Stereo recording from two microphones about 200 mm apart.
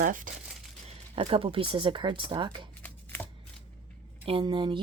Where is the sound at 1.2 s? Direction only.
30° right (ahead or behind).